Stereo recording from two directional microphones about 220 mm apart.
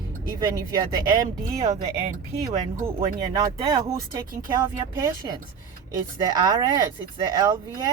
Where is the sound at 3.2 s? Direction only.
20° right (ahead or behind).